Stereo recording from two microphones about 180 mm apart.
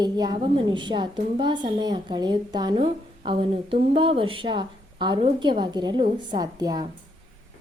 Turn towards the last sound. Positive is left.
turn(degrees=-20)  # may be behind; listen again after turning